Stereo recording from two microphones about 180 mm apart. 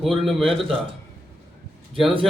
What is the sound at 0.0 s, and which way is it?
Speech, centre (ahead or behind).